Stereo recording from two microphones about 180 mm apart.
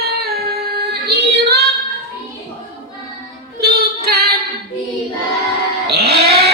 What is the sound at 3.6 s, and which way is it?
Female singing, 60° right (ahead or behind).